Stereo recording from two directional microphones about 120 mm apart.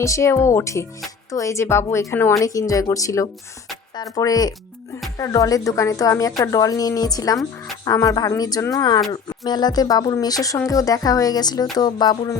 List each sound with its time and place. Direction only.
0.0 s a woman's voice: 25° left (ahead or behind)